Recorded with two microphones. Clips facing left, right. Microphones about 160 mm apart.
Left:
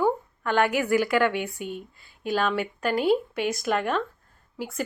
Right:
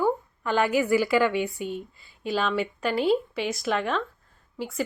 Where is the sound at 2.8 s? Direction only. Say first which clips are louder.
Left 1 dB; 45° left (ahead or behind).